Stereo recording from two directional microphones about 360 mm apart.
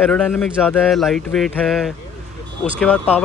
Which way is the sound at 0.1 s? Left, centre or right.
Centre.